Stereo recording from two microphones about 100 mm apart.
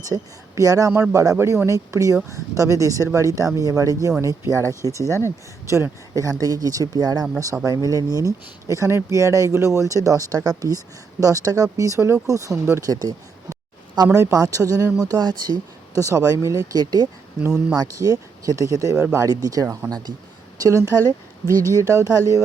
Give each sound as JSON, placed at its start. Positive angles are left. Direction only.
{"t": 0.1, "sound": "speech", "side_deg": -35}
{"t": 12.8, "sound": "a sound", "side_deg": -40}
{"t": 14.2, "sound": "speech", "side_deg": -35}
{"t": 16.0, "sound": "speech", "side_deg": -35}
{"t": 17.4, "sound": "speech", "side_deg": -5}
{"t": 17.7, "sound": "speech", "side_deg": -35}
{"t": 21.4, "sound": "speech", "side_deg": 25}
{"t": 21.8, "sound": "speech", "side_deg": -35}